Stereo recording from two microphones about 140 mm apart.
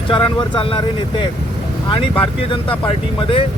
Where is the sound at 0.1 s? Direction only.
35° left (ahead or behind).